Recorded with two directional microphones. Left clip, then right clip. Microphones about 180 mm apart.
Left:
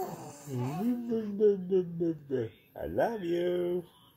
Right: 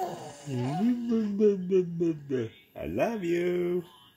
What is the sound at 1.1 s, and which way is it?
Speech, 40° right (ahead or behind).